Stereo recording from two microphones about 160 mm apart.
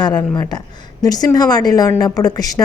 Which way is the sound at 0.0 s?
25° left (ahead or behind).